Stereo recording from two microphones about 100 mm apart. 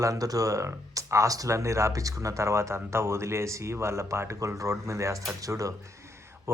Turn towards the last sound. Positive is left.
turn(degrees=-25)  # may be behind; listen again after turning